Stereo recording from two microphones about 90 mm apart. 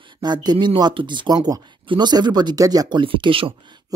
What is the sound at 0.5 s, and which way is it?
Speech, 65° right (ahead or behind).